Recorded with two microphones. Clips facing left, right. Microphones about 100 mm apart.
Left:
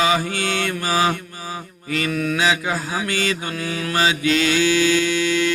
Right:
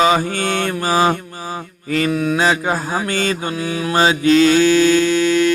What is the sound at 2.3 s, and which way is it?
Mantra, 40° right (ahead or behind).